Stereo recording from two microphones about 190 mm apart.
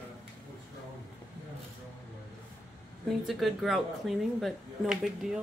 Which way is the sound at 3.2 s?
Centre (ahead or behind).